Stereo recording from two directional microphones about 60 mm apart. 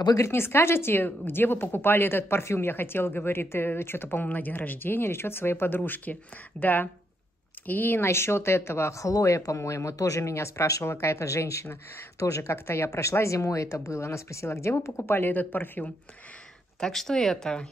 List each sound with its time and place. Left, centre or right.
0.3 s speech: left
8.1 s speech: left
15.0 s speech: left
16.8 s speech: centre